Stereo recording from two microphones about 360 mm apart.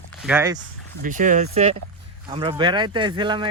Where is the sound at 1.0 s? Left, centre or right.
Right.